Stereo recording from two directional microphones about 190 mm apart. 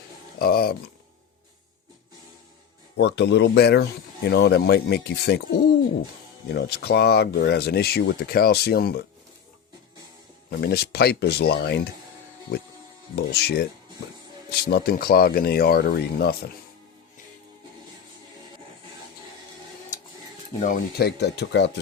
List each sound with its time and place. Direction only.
0.3 s speech: 55° left (ahead or behind)
3.0 s speech: 65° left (ahead or behind)
10.6 s speech: 55° left (ahead or behind)
13.1 s speech: 60° left (ahead or behind)
20.6 s speech: 45° left (ahead or behind); by 21.7 s 65° left (ahead or behind)